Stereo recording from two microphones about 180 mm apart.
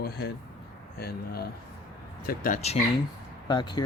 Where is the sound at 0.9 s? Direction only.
60° left (ahead or behind).